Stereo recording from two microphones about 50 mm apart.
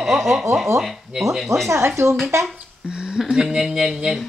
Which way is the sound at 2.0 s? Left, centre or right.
Right.